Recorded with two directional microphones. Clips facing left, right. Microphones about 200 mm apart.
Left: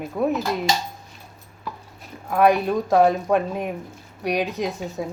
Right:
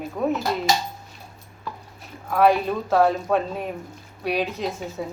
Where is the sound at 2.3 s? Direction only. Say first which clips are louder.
Left 1 dB; 15° left (ahead or behind).